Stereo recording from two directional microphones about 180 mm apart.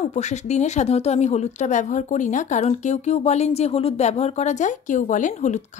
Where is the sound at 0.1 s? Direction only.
40° left (ahead or behind).